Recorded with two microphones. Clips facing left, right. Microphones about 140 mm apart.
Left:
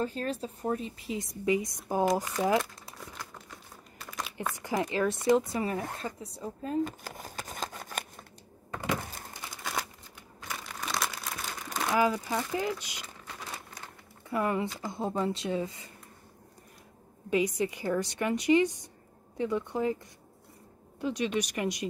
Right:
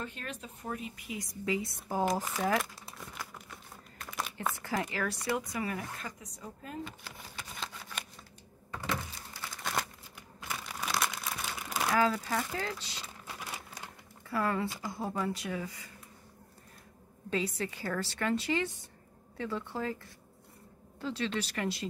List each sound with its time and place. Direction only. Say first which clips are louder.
0.0 s a woman's voice: left 9 dB; 35° left (ahead or behind); by 2.0 s 15° left (ahead or behind)
2.4 s crumpling: left 4 dB; centre (ahead or behind)
4.6 s a woman's voice: left 8 dB; 20° left (ahead or behind)
6.8 s shuffling cards: left 10 dB; 45° left (ahead or behind)
9.0 s a sound: left 4 dB; 50° left (ahead or behind)
9.3 s crumpling: left 1 dB; 20° left (ahead or behind)
9.6 s a sound: even; centre (ahead or behind)
10.4 s crumpling: even; 5° right (ahead or behind)
11.9 s speech: left 2 dB; 15° left (ahead or behind)
14.3 s a woman's voice: left 2 dB; 20° left (ahead or behind)
17.3 s speech: left 6 dB; 15° left (ahead or behind)